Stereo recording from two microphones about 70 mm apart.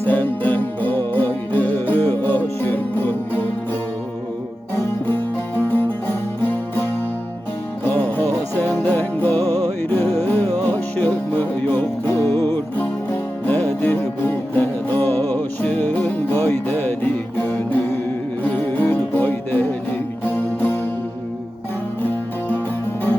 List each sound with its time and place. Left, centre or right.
0.0 s music: left
5.7 s music: left
13.4 s music: left